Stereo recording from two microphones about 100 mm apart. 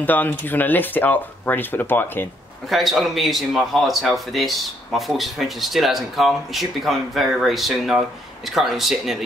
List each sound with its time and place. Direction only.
0.0 s speech: 15° left (ahead or behind)
2.7 s speech: centre (ahead or behind)